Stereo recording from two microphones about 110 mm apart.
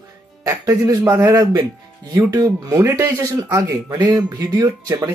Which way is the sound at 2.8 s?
25° right (ahead or behind).